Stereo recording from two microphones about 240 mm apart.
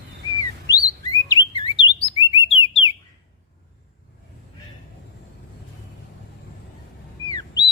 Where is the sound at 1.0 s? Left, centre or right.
Centre.